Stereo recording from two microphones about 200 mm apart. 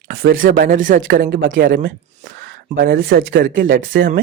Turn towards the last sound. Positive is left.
turn(degrees=-45)  # may be behind; listen again after turning